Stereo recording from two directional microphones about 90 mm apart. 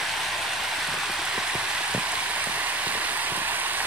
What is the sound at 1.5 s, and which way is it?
Vehicle, 10° right (ahead or behind).